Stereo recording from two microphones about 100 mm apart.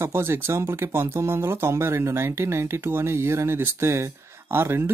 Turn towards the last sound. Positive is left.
turn(degrees=-25)  # may be behind; listen again after turning